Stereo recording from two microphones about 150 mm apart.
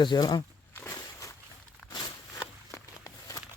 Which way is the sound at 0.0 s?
30° left (ahead or behind).